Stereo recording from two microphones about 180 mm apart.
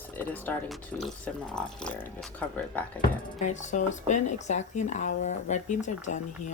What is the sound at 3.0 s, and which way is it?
Speech, 40° left (ahead or behind).